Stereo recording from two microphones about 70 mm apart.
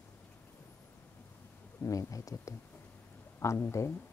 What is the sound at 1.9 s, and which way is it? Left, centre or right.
Speech, left.